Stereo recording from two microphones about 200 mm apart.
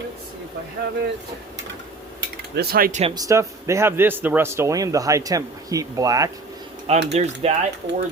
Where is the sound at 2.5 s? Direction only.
50° right (ahead or behind).